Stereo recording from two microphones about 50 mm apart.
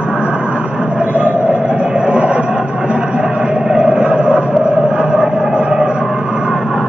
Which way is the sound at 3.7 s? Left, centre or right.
Centre.